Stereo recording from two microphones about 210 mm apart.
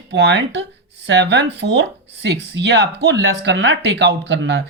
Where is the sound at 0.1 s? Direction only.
55° right (ahead or behind).